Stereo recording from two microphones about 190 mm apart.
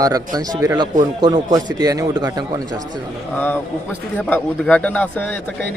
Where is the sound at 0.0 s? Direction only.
20° right (ahead or behind).